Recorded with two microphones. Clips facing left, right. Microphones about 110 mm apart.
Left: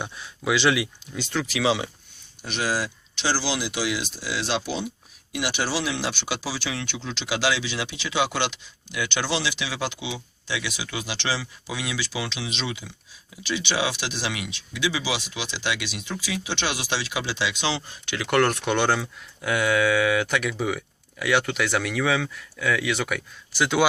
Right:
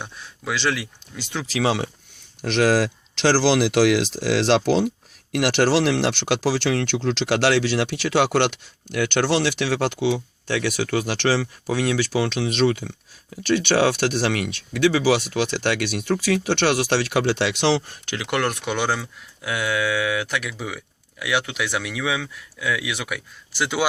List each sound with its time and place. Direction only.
0.0 s speech: 5° left (ahead or behind)
1.2 s speech: 15° right (ahead or behind)
1.6 s speech: 50° right (ahead or behind)
2.4 s speech: 90° right; by 18.0 s 65° right (ahead or behind)
18.2 s speech: 15° right (ahead or behind)